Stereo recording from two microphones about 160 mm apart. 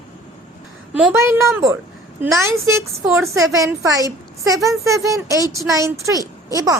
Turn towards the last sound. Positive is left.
turn(degrees=-20)  # may be behind; listen again after turning